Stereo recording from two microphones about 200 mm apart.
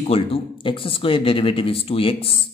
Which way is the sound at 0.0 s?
30° left (ahead or behind).